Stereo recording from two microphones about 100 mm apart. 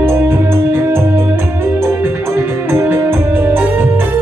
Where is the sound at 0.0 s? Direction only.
25° right (ahead or behind).